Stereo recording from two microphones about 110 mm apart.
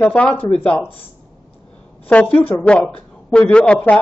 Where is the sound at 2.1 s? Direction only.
15° left (ahead or behind).